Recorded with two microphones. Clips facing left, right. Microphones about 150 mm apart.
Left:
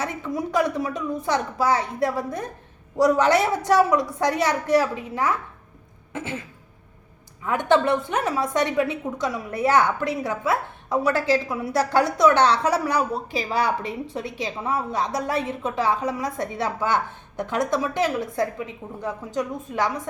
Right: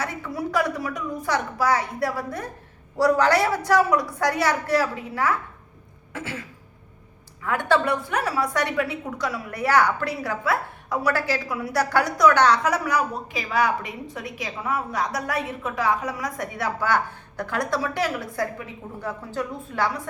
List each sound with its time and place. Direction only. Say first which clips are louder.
0.0 s a woman's voice: left 2 dB; 20° left (ahead or behind)
7.4 s a woman's voice: left 2 dB; 20° left (ahead or behind)